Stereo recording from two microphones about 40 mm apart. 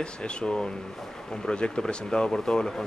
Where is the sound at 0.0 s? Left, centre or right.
Left.